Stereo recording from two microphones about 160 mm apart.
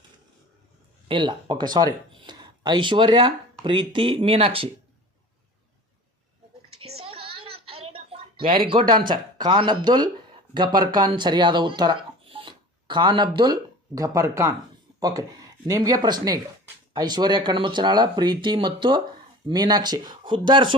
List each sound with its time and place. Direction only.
1.0 s speech: 30° right (ahead or behind)
6.9 s a sound: 35° right (ahead or behind)
8.9 s speech: 30° right (ahead or behind)